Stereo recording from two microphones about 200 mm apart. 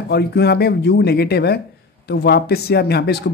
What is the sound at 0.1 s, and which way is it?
Speech, 55° left (ahead or behind).